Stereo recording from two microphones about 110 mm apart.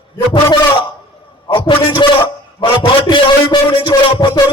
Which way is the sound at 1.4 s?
50° left (ahead or behind).